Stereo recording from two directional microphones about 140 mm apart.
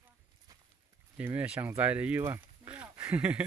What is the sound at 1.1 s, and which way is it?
Speech, 10° right (ahead or behind).